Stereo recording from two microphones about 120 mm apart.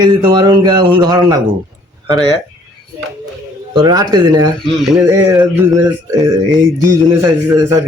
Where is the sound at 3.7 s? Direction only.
35° right (ahead or behind).